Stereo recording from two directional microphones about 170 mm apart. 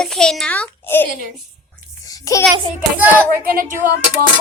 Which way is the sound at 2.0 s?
20° left (ahead or behind).